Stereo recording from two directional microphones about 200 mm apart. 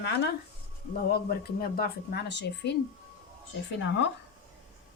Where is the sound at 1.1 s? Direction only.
50° left (ahead or behind).